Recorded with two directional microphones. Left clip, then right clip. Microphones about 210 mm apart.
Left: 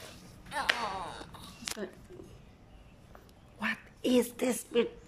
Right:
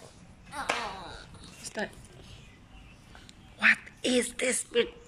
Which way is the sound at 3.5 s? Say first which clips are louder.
Right 12 dB; 15° left (ahead or behind).